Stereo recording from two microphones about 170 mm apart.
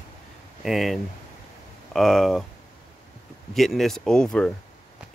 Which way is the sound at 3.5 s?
Centre (ahead or behind).